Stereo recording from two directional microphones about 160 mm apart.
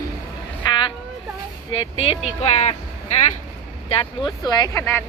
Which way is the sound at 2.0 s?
40° left (ahead or behind).